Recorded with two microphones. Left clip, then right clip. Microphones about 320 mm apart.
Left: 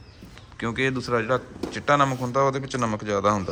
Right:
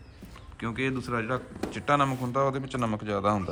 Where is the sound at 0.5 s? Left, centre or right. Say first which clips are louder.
Left 6 dB; centre.